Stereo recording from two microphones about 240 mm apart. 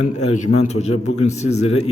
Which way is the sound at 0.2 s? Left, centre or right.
Left.